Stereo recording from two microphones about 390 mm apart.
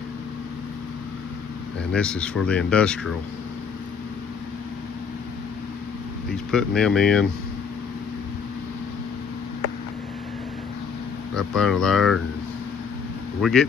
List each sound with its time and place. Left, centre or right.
1.9 s speech: centre
6.3 s speech: centre
11.3 s speech: centre
13.4 s speech: centre